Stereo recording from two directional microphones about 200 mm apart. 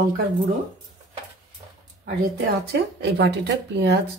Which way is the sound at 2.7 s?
55° right (ahead or behind).